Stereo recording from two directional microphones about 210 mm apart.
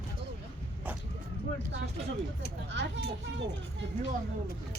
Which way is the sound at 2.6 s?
60° right (ahead or behind).